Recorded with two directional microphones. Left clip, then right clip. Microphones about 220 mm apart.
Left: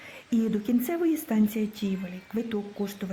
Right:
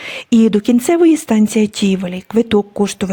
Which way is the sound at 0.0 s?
45° right (ahead or behind).